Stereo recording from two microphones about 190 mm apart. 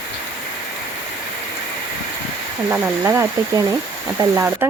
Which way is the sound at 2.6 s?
10° right (ahead or behind).